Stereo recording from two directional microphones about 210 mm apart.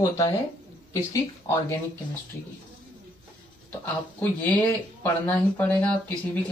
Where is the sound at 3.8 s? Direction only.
5° left (ahead or behind).